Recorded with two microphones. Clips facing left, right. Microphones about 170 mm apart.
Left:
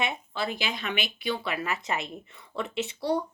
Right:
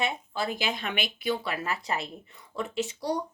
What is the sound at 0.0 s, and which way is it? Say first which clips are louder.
A woman's voice: even; 40° right (ahead or behind).